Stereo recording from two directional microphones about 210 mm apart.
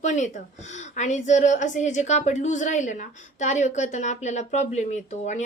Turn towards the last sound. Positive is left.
turn(degrees=35)  # may be behind; listen again after turning